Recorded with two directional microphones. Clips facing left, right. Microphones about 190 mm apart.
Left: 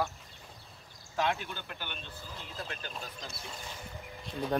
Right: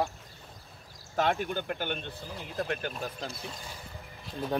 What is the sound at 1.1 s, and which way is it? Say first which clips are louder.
Speech: right 4 dB; 50° right (ahead or behind).